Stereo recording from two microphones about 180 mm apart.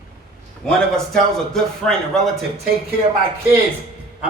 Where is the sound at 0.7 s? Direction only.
5° left (ahead or behind).